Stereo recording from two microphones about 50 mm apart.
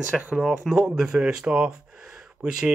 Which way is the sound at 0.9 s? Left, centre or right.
Centre.